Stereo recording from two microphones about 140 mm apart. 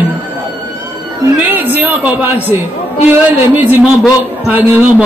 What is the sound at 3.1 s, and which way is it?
A woman's voice, 15° right (ahead or behind).